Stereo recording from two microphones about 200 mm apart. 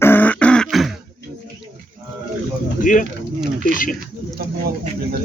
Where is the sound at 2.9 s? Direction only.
40° left (ahead or behind).